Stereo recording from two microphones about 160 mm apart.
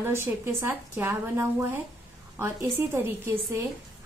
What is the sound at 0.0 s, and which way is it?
A woman's voice, 15° right (ahead or behind).